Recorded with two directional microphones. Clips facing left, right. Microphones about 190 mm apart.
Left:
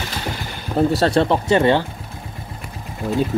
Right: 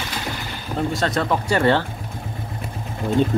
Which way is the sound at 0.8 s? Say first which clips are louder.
Left 6 dB; 35° left (ahead or behind).